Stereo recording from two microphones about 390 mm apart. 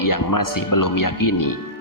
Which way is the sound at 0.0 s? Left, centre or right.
Left.